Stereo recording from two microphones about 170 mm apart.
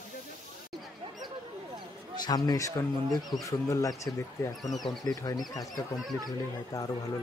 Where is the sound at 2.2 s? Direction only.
20° left (ahead or behind).